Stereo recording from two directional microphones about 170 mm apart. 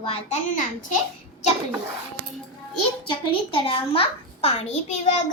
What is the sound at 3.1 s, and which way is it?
A child's voice, 30° left (ahead or behind).